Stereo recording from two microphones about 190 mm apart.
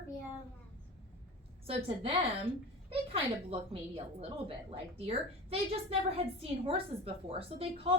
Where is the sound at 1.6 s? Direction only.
30° right (ahead or behind).